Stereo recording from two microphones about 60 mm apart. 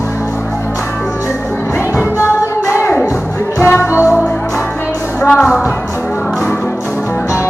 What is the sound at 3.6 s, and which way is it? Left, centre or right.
Music, left.